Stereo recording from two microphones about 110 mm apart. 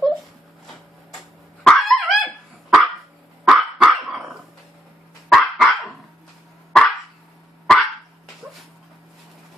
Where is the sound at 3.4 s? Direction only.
5° right (ahead or behind).